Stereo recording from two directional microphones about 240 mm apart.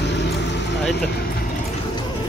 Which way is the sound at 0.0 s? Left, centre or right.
Left.